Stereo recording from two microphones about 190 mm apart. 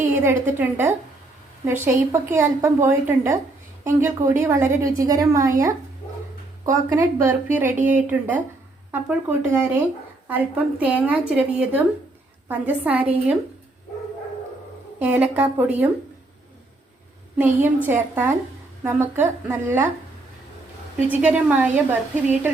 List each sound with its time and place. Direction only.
0.1 s a woman's voice: 15° right (ahead or behind)
6.7 s a woman's voice: 15° right (ahead or behind)
7.8 s speech: 40° right (ahead or behind)
8.0 s a woman's voice: 10° right (ahead or behind)
14.9 s a woman's voice: 10° right (ahead or behind)
17.3 s a woman's voice: 10° right (ahead or behind)
21.1 s a woman's voice: 5° right (ahead or behind)